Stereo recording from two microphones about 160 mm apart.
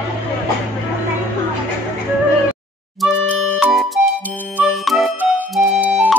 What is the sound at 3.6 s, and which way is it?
Music, centre (ahead or behind).